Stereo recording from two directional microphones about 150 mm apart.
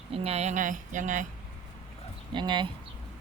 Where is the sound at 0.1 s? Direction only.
40° right (ahead or behind); by 1.3 s 55° right (ahead or behind).